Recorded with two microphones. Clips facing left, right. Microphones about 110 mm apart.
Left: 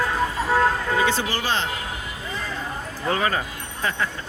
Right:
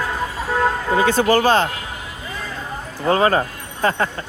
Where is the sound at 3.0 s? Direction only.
40° right (ahead or behind).